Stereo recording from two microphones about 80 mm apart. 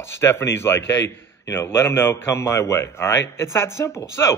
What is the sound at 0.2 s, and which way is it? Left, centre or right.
A man's voice, left.